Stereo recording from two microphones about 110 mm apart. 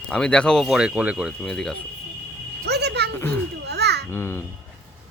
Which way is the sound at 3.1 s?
15° left (ahead or behind).